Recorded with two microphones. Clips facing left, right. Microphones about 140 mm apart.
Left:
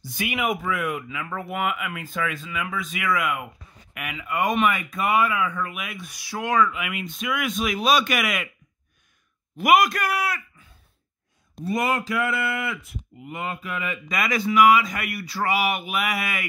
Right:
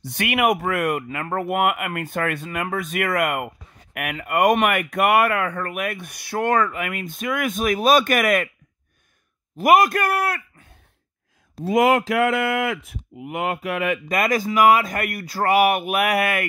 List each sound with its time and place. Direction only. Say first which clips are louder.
0.0 s speech: right 6 dB; 65° right (ahead or behind); by 8.5 s 50° right (ahead or behind)
9.6 s speech: right 3 dB; 45° right (ahead or behind)
11.6 s speech: right 7 dB; 90° right; by 14.0 s 75° right (ahead or behind)
14.0 s speech: right 4 dB; 50° right (ahead or behind)